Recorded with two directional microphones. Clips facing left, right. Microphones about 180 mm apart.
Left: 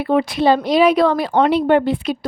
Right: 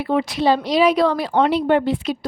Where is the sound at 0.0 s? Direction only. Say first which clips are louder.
Left 3 dB; 55° left (ahead or behind).